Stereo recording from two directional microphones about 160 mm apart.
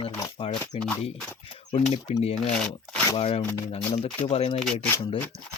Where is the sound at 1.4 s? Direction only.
35° left (ahead or behind).